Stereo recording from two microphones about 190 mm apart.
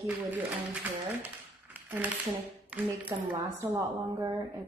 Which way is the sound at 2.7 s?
10° right (ahead or behind).